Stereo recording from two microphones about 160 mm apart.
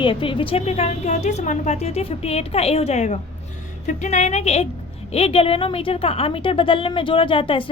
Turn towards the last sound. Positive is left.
turn(degrees=35)  # may be behind; listen again after turning